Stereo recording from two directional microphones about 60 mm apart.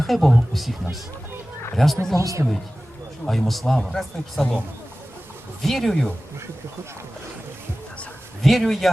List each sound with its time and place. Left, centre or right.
0.0 s a man's voice: centre
2.1 s speech: right
3.2 s a man's voice: centre
5.6 s a man's voice: centre
8.4 s a man's voice: centre